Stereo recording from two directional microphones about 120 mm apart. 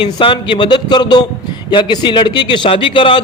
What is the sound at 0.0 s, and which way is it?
A man's voice, 45° left (ahead or behind).